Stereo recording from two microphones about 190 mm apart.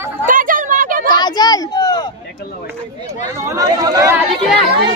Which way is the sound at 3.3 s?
15° right (ahead or behind).